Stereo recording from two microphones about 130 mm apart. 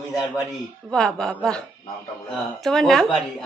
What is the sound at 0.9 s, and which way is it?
A woman's voice, 5° left (ahead or behind).